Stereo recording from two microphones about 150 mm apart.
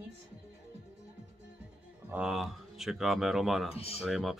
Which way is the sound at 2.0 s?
5° right (ahead or behind).